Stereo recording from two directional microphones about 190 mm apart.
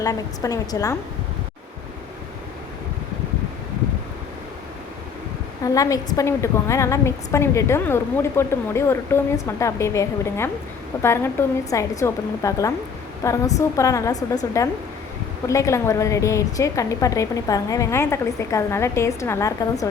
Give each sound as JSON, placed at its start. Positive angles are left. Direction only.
{"t": 0.0, "sound": "a woman's voice", "side_deg": 20}
{"t": 5.6, "sound": "a woman's voice", "side_deg": 20}